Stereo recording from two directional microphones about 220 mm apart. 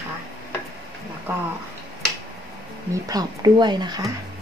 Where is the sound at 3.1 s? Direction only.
20° right (ahead or behind).